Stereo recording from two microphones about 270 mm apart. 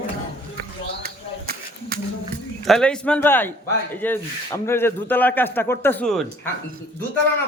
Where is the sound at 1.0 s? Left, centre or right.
Right.